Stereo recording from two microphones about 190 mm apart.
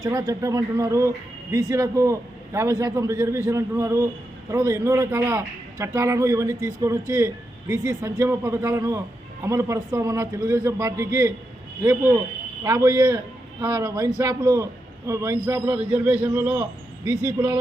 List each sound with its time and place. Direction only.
0.0 s speech: 20° right (ahead or behind)